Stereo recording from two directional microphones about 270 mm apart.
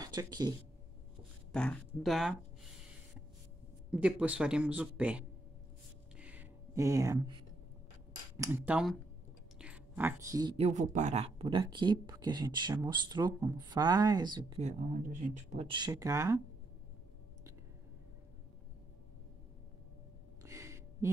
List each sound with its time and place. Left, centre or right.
0.0 s speech: centre
1.5 s speech: centre
3.9 s speech: centre
6.1 s a sound: centre
8.4 s speech: centre
10.7 s speech: right; by 16.3 s centre
20.4 s a sound: centre